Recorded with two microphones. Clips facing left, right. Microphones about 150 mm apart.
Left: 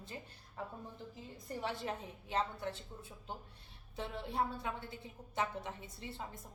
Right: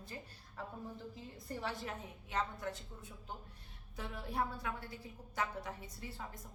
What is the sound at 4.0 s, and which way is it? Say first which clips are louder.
A woman's voice: left 2 dB; 25° left (ahead or behind).